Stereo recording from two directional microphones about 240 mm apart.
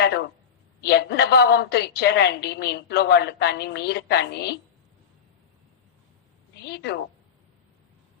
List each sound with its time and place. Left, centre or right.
0.0 s a sound: left
0.8 s a woman's voice: left
6.6 s a woman's voice: left